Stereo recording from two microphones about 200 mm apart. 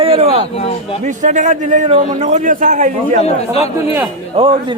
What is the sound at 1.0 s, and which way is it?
A man's voice, 35° right (ahead or behind).